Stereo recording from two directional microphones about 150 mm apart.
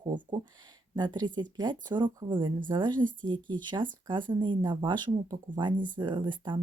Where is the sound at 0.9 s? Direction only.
30° right (ahead or behind).